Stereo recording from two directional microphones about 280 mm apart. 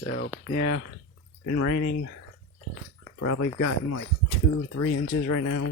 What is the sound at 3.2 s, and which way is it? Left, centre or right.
Speech, left.